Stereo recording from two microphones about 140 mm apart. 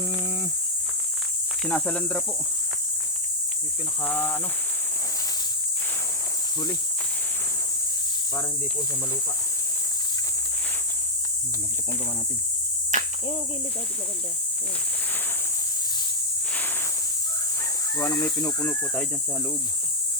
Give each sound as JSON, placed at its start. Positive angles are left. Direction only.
{"t": 1.6, "sound": "speech", "side_deg": 5}
{"t": 4.0, "sound": "speech", "side_deg": 10}
{"t": 12.9, "sound": "cricket", "side_deg": -60}
{"t": 17.9, "sound": "speech", "side_deg": 20}
{"t": 18.6, "sound": "speech", "side_deg": 10}